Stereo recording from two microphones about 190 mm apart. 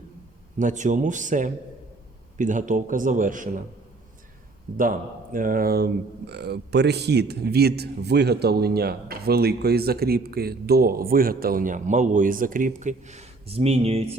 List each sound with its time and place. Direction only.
0.6 s speech: 40° right (ahead or behind)
4.8 s speech: 45° right (ahead or behind)